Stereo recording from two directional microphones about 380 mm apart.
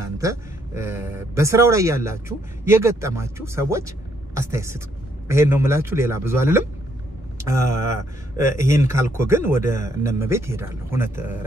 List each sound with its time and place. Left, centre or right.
0.0 s speech: centre
9.7 s speech: centre
10.0 s speech: centre